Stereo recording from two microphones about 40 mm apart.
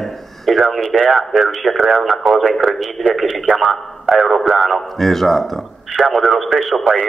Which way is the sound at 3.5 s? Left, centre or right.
Right.